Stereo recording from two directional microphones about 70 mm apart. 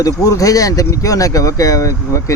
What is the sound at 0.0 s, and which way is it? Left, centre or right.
Speech, left.